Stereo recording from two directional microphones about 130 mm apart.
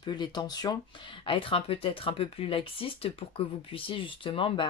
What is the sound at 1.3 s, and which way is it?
Speech, 45° left (ahead or behind).